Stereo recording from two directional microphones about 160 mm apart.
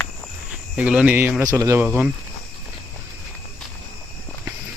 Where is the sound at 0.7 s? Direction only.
5° right (ahead or behind).